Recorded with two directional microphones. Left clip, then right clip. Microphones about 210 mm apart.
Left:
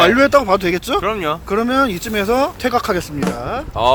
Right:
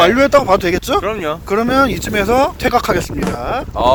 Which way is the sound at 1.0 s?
20° left (ahead or behind).